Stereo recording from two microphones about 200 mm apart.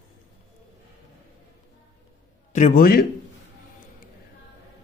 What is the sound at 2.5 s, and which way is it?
Speech, 40° left (ahead or behind).